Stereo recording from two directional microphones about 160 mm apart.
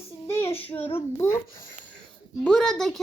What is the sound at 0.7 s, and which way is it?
Speech, 15° left (ahead or behind).